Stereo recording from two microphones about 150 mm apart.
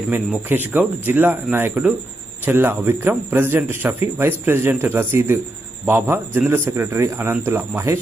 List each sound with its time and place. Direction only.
0.4 s a man's voice: 15° right (ahead or behind)